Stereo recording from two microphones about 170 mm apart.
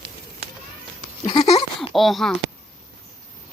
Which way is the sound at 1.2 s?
25° left (ahead or behind).